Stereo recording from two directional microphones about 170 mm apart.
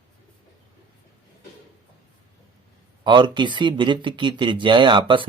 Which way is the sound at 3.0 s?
25° right (ahead or behind).